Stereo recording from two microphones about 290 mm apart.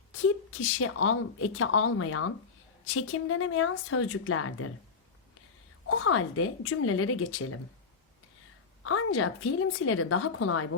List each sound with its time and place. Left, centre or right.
0.3 s a woman's voice: left
5.9 s a woman's voice: left
8.8 s a woman's voice: left